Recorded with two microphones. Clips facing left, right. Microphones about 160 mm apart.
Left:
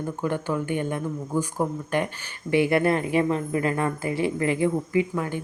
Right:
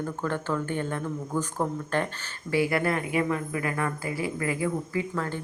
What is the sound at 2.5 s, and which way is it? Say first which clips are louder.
A woman's voice: left 4 dB; 25° left (ahead or behind).